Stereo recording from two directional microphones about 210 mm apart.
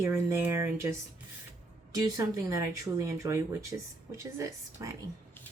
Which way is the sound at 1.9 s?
15° right (ahead or behind).